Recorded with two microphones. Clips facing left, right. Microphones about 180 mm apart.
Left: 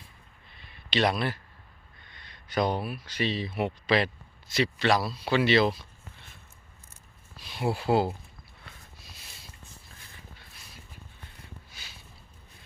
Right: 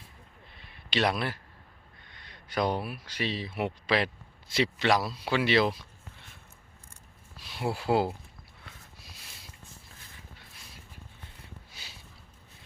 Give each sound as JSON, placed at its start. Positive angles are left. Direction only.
{"t": 0.9, "sound": "speech", "side_deg": -5}
{"t": 4.4, "sound": "a man's voice", "side_deg": -25}
{"t": 4.8, "sound": "speech", "side_deg": -15}
{"t": 7.4, "sound": "speech", "side_deg": -5}
{"t": 11.8, "sound": "a sound", "side_deg": -35}